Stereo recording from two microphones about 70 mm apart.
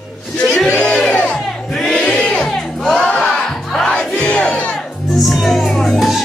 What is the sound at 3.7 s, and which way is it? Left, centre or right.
Music, centre.